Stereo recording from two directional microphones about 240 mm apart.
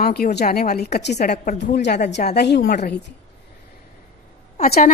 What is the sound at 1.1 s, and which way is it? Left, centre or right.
A woman's voice, left.